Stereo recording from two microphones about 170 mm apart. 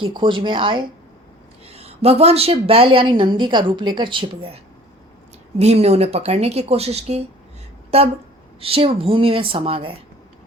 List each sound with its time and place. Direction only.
0.0 s a woman's voice: 30° right (ahead or behind)